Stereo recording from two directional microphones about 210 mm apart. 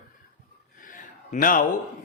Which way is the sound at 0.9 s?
40° left (ahead or behind).